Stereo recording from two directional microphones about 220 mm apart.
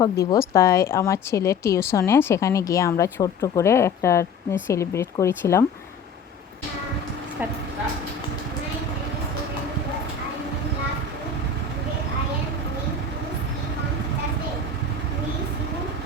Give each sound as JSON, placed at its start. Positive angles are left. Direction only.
{"t": 0.0, "sound": "a woman's voice", "side_deg": 15}